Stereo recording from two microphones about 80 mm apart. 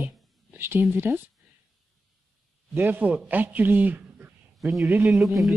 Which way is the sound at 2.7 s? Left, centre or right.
Right.